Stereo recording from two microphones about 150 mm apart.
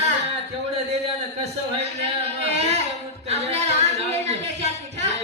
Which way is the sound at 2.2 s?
45° right (ahead or behind).